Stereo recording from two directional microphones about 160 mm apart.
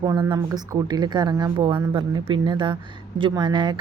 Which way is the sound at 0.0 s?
25° right (ahead or behind).